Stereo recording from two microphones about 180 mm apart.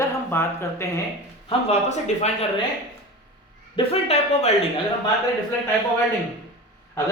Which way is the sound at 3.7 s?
35° left (ahead or behind).